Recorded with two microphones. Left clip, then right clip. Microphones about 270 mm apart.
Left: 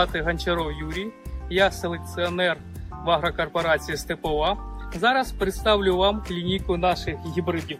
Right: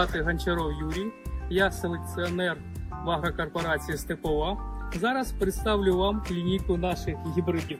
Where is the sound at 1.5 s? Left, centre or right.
Left.